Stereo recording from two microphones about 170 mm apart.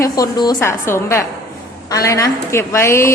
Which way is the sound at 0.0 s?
25° left (ahead or behind).